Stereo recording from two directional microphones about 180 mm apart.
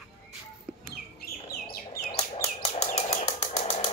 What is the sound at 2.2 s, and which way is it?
Bird, 35° left (ahead or behind).